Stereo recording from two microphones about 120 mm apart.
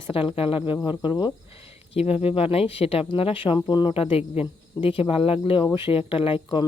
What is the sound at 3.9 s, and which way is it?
A woman's voice, 55° left (ahead or behind).